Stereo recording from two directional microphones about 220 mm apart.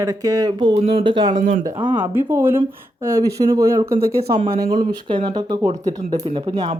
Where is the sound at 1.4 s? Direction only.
35° right (ahead or behind).